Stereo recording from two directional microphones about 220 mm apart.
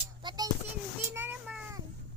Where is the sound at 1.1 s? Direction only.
10° right (ahead or behind).